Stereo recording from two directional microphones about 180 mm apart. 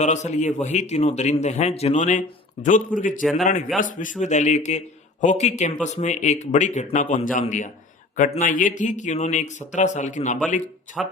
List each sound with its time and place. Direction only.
0.0 s a man's voice: 40° left (ahead or behind)
3.2 s a man's voice: centre (ahead or behind)
3.8 s a man's voice: 45° left (ahead or behind)
11.0 s a man's voice: centre (ahead or behind)